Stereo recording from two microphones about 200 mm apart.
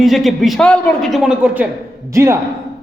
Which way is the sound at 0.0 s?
Centre (ahead or behind).